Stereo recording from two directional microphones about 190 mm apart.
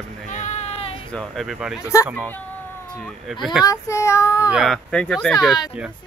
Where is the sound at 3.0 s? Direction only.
Centre (ahead or behind).